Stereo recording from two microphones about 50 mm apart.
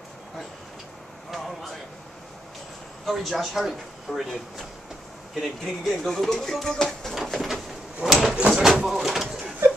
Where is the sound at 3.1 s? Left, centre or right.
Centre.